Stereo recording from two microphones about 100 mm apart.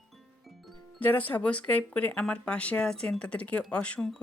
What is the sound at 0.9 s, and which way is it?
Speech, 15° left (ahead or behind).